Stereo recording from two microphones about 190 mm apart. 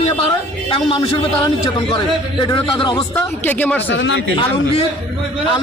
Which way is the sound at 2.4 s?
25° left (ahead or behind).